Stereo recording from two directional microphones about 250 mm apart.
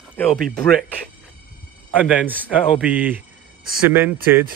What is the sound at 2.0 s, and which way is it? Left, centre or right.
Speech, centre.